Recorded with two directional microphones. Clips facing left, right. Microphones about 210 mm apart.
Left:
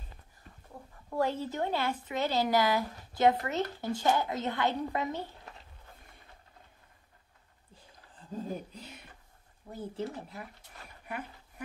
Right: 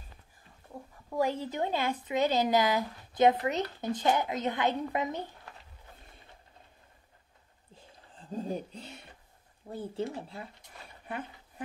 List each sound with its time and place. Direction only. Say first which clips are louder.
1.1 s speech: right 1 dB; 10° right (ahead or behind)
8.7 s speech: right 2 dB; 30° right (ahead or behind)
11.1 s a sound: right 1 dB; 30° right (ahead or behind)